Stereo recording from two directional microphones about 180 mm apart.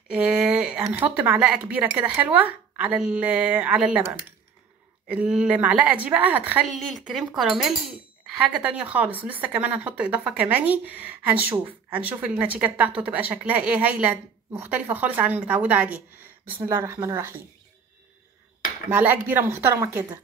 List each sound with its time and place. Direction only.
0.1 s a sound: 5° right (ahead or behind)
1.1 s speech: 10° right (ahead or behind)
5.0 s speech: 5° right (ahead or behind)
18.9 s speech: 10° right (ahead or behind)